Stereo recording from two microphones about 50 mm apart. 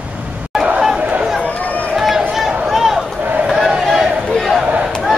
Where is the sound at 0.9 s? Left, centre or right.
Right.